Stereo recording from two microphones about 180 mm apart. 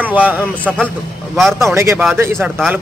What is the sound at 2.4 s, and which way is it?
Speech, centre (ahead or behind).